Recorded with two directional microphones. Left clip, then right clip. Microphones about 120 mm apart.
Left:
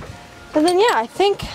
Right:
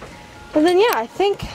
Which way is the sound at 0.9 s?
10° left (ahead or behind).